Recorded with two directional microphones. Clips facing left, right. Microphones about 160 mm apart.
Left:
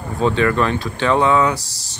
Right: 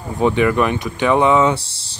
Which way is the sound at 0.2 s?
15° right (ahead or behind).